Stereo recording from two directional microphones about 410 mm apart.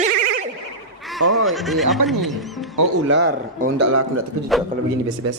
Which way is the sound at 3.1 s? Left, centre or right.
Right.